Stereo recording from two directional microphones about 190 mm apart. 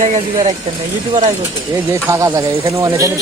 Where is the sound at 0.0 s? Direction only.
40° right (ahead or behind).